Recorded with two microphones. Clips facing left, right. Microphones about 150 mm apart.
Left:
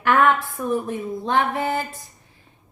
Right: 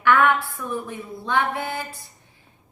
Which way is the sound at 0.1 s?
40° left (ahead or behind).